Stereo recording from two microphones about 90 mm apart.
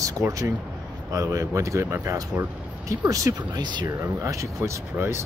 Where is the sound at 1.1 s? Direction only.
35° right (ahead or behind).